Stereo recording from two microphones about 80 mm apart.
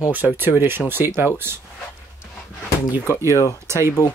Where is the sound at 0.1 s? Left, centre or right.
Right.